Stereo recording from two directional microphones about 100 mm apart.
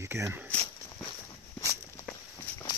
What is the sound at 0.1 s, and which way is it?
Speech, 25° right (ahead or behind).